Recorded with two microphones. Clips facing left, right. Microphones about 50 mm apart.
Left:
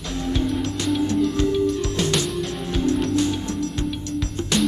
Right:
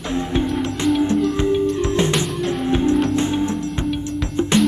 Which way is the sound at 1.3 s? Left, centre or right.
Right.